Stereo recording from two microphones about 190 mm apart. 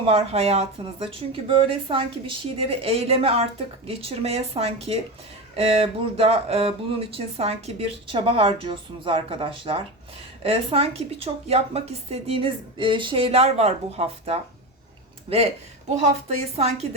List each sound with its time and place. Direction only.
0.0 s speech: 30° right (ahead or behind)
16.0 s speech: 35° right (ahead or behind)